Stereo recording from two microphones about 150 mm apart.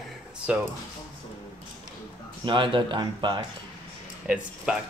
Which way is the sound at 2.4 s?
35° right (ahead or behind).